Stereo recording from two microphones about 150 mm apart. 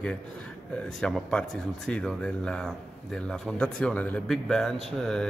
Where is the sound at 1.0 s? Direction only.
5° left (ahead or behind).